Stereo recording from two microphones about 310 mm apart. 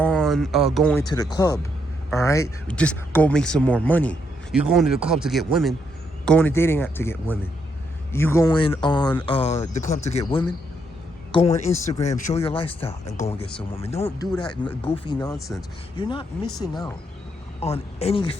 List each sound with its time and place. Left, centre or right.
0.0 s speech: centre
13.6 s speech: centre